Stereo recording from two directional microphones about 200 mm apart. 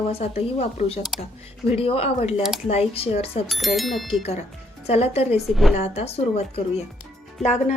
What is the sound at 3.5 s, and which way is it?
Speech, centre (ahead or behind).